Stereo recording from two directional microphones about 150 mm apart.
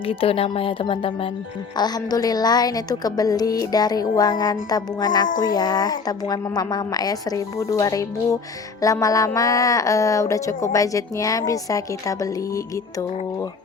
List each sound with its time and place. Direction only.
0.0 s a woman's voice: 35° left (ahead or behind); by 13.5 s 20° left (ahead or behind)